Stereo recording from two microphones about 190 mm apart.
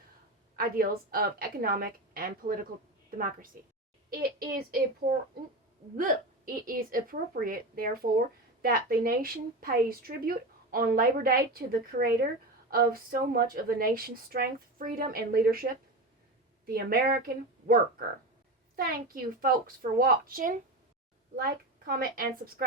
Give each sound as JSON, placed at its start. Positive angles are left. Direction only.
{"t": 0.5, "sound": "a woman's voice", "side_deg": -50}